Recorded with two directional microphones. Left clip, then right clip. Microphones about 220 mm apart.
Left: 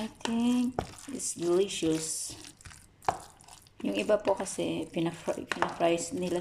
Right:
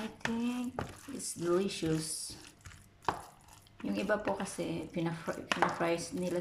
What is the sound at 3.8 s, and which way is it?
Speech, 15° left (ahead or behind).